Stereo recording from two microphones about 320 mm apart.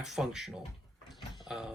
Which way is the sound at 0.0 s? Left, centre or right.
Centre.